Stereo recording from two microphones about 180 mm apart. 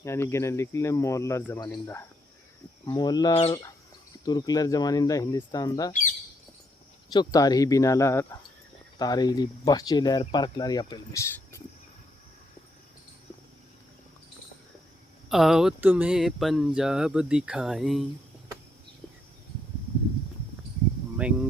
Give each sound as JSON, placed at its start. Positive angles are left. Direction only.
{"t": 0.0, "sound": "speech", "side_deg": 15}
{"t": 5.9, "sound": "bird", "side_deg": 45}
{"t": 7.1, "sound": "speech", "side_deg": 20}
{"t": 15.3, "sound": "speech", "side_deg": 0}
{"t": 21.2, "sound": "speech", "side_deg": -5}